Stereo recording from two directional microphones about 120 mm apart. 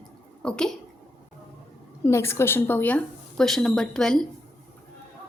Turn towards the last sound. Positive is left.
turn(degrees=5)  # may be behind; listen again after turning